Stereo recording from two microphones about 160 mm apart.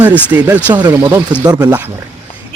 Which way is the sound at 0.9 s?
15° right (ahead or behind).